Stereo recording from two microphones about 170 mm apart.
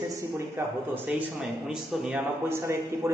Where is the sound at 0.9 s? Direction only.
10° right (ahead or behind).